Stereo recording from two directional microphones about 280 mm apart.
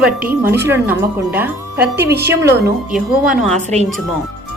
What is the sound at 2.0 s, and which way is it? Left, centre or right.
Speech, right.